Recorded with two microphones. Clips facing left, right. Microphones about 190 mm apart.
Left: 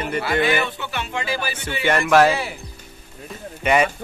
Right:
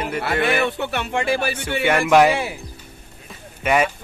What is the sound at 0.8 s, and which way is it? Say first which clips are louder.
Speech: right 5 dB; 60° right (ahead or behind).